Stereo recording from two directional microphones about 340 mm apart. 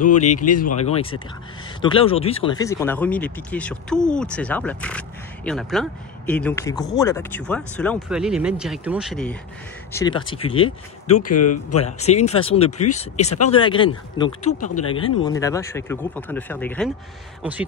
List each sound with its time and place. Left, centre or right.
0.7 s speech: centre
9.9 s speech: centre
11.3 s speech: left
11.8 s speech: centre